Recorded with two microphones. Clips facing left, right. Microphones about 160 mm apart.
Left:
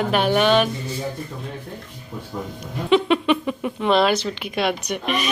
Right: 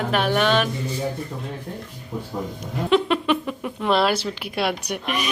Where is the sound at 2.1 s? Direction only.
20° right (ahead or behind).